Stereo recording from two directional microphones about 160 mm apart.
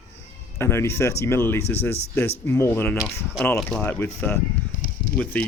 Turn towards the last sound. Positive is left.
turn(degrees=10)  # may be behind; listen again after turning